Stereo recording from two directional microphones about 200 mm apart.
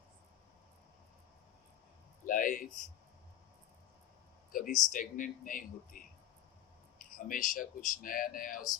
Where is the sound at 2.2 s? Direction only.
45° left (ahead or behind).